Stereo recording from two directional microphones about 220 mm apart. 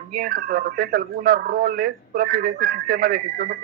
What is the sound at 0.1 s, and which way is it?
Speech, 40° right (ahead or behind).